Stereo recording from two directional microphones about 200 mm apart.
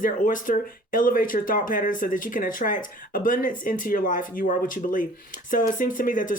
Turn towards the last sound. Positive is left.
turn(degrees=40)  # may be behind; listen again after turning